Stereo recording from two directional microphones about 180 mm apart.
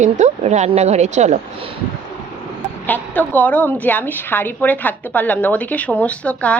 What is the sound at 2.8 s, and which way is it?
A woman's voice, 10° left (ahead or behind).